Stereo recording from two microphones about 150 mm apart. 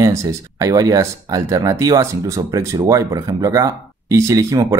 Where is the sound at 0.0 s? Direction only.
20° right (ahead or behind).